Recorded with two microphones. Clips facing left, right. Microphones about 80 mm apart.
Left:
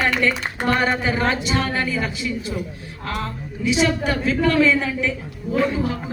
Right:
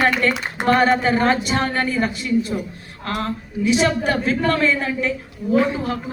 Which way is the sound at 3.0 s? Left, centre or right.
Right.